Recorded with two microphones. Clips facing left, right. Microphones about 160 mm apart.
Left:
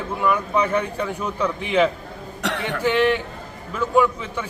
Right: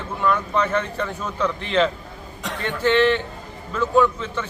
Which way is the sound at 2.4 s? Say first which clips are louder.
Left 5 dB; 75° left (ahead or behind).